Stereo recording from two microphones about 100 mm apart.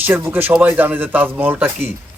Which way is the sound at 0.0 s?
20° right (ahead or behind).